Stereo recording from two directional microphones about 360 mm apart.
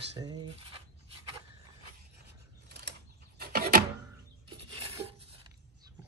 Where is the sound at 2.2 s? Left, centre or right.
Right.